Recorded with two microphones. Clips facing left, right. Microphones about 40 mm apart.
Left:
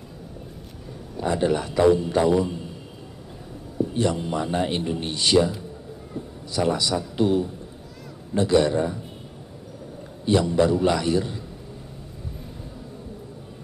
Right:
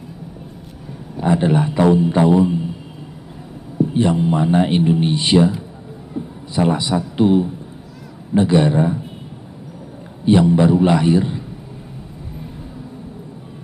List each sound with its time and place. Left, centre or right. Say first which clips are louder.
1.1 s speech: right 6 dB; right
3.7 s a man's voice: right 7 dB; right
10.2 s speech: right 6 dB; right